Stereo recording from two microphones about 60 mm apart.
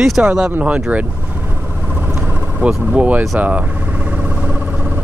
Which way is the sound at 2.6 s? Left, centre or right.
Centre.